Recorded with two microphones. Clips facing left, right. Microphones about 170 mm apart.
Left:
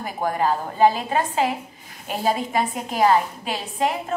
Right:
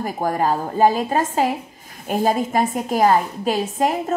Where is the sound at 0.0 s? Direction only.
40° right (ahead or behind).